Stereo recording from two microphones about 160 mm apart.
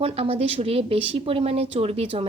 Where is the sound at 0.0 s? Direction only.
40° right (ahead or behind).